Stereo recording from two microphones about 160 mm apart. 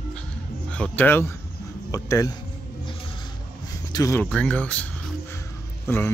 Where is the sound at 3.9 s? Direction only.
20° left (ahead or behind).